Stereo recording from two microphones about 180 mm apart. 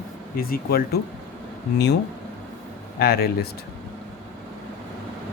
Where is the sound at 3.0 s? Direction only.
60° left (ahead or behind).